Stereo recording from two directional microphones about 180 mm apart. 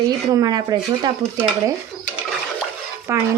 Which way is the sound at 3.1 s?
15° right (ahead or behind).